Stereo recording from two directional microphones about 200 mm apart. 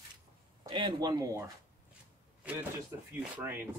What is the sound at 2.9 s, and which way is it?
Speech, 15° right (ahead or behind).